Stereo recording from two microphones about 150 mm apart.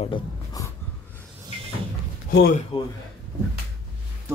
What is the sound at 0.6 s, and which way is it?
Snort, 25° left (ahead or behind).